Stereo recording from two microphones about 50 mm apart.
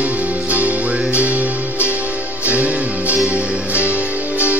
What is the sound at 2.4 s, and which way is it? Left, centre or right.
Music, right.